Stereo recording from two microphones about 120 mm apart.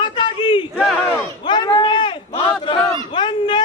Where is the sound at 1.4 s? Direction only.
35° left (ahead or behind).